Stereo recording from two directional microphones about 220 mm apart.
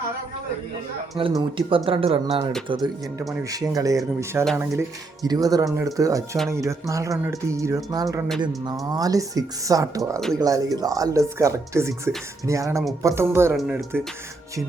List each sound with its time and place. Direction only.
1.2 s speech: 20° right (ahead or behind)